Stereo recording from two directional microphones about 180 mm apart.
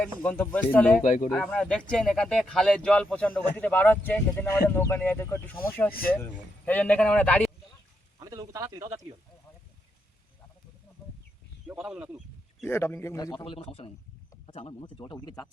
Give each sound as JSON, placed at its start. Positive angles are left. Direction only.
{"t": 0.3, "sound": "speech", "side_deg": 10}
{"t": 1.0, "sound": "speech", "side_deg": 45}
{"t": 1.3, "sound": "speech", "side_deg": 5}
{"t": 5.9, "sound": "speech", "side_deg": 55}
{"t": 6.1, "sound": "speech", "side_deg": 10}
{"t": 8.2, "sound": "speech", "side_deg": -20}
{"t": 11.7, "sound": "a man's voice", "side_deg": -10}
{"t": 12.6, "sound": "speech", "side_deg": 15}